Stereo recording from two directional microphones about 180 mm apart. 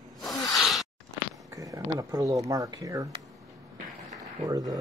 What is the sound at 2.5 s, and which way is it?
Speech, 20° right (ahead or behind).